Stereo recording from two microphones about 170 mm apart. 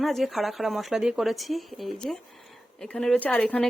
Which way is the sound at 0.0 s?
Centre (ahead or behind).